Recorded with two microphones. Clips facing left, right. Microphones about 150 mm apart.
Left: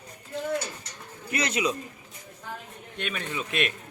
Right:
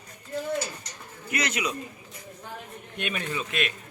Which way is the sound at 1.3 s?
25° left (ahead or behind).